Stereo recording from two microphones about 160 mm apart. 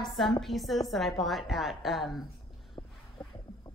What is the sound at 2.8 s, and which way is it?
Boat, 20° left (ahead or behind).